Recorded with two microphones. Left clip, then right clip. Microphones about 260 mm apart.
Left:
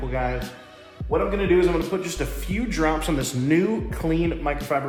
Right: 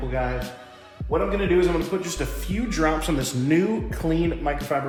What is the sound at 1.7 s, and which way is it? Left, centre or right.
Speech, centre.